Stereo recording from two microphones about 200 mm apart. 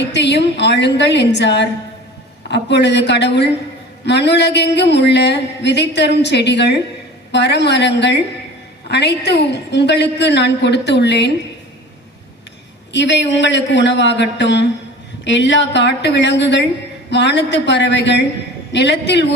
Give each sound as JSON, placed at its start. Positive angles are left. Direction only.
{"t": 0.1, "sound": "speech", "side_deg": 60}
{"t": 12.9, "sound": "speech", "side_deg": 60}